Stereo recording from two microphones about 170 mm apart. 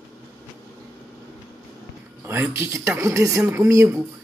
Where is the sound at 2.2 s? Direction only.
10° right (ahead or behind).